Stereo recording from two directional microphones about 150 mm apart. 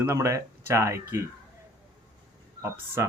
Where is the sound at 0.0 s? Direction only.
20° right (ahead or behind).